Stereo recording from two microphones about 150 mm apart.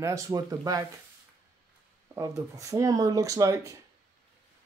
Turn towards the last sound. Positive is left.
turn(degrees=-20)  # may be behind; listen again after turning